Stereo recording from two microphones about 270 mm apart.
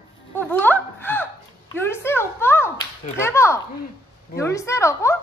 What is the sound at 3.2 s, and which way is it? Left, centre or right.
A woman's voice, centre.